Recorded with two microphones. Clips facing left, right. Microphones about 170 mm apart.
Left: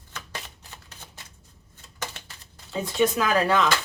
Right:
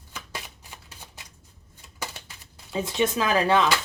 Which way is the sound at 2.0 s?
10° right (ahead or behind).